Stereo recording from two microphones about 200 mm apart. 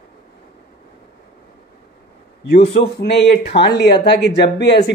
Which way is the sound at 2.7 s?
55° left (ahead or behind).